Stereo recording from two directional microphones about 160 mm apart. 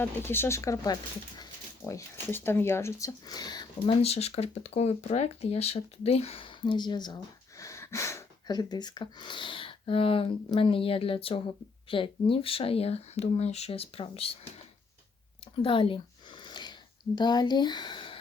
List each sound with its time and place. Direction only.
0.0 s speech: 15° left (ahead or behind)
4.0 s speech: 40° left (ahead or behind)
15.6 s a sound: 35° left (ahead or behind)
17.2 s speech: 25° left (ahead or behind)